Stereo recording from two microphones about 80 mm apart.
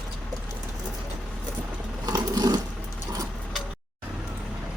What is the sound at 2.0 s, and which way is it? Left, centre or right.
Sewing machine, right.